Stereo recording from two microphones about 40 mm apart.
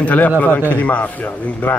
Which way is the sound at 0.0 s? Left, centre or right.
Left.